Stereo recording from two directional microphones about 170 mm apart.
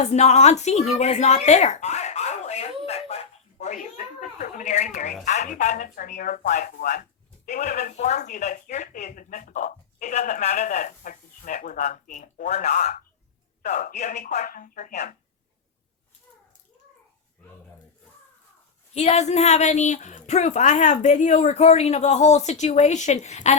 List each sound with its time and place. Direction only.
0.0 s a woman's voice: 40° left (ahead or behind)
18.9 s speech: 40° left (ahead or behind)